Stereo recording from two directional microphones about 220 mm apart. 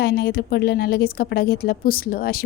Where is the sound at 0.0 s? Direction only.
45° left (ahead or behind).